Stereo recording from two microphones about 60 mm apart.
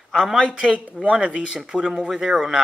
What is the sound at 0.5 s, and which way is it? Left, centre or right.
A man's voice, centre.